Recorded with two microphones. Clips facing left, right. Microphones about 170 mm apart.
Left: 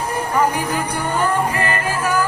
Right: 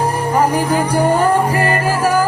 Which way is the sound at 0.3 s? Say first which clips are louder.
Right 4 dB; 35° right (ahead or behind).